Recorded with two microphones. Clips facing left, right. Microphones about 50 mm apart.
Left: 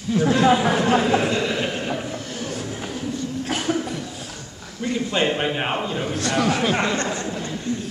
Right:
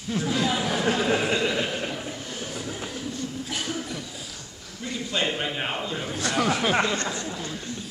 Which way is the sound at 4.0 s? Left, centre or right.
Left.